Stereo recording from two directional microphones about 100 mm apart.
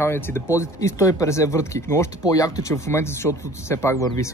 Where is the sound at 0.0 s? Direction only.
25° left (ahead or behind).